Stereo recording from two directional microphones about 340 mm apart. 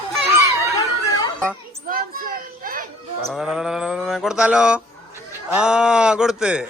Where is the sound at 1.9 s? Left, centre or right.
Right.